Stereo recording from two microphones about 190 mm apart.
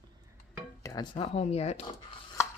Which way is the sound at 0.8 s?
25° left (ahead or behind).